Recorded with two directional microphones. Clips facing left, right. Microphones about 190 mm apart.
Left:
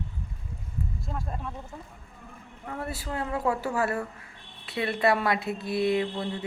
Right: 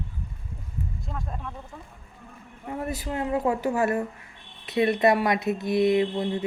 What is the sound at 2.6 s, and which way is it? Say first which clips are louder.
Speech: right 4 dB; 20° right (ahead or behind).